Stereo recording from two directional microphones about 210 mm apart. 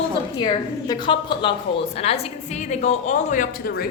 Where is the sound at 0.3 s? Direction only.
20° left (ahead or behind).